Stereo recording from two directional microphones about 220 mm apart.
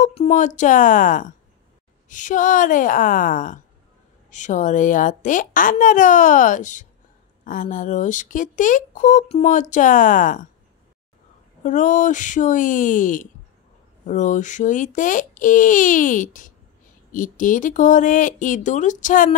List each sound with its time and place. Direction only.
0.0 s speech: 30° left (ahead or behind)
11.6 s speech: 35° left (ahead or behind)